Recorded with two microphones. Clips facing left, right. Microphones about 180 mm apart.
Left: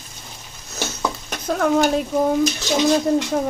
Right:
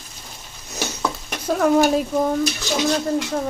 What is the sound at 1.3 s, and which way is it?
Speech, 5° right (ahead or behind).